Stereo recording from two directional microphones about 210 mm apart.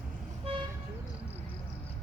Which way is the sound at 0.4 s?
25° right (ahead or behind).